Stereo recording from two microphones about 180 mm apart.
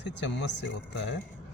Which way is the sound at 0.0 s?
75° left (ahead or behind).